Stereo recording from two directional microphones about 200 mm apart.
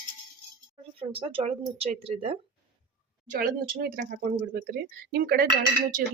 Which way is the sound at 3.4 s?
45° right (ahead or behind).